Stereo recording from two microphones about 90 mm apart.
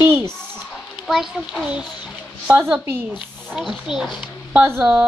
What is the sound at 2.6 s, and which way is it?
Speech, 25° right (ahead or behind).